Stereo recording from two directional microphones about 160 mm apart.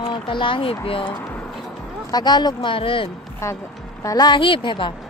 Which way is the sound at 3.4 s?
15° left (ahead or behind).